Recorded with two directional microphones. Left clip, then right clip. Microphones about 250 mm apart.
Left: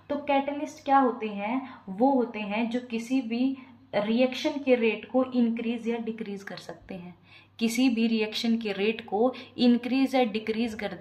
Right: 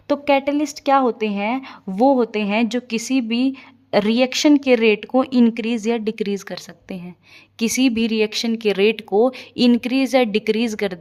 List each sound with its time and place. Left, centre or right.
0.1 s speech: right